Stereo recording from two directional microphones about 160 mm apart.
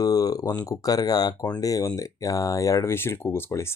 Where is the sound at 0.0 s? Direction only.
20° left (ahead or behind).